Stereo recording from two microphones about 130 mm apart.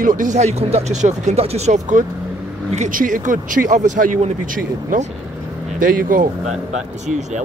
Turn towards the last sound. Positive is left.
turn(degrees=-65)  # may be behind; listen again after turning